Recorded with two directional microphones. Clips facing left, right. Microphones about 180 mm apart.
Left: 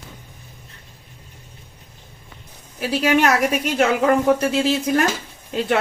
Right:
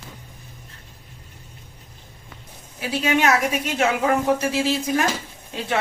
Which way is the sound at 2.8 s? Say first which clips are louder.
Left 3 dB; 55° left (ahead or behind).